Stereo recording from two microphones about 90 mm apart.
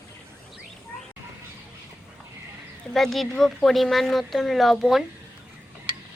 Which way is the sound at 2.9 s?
Centre (ahead or behind).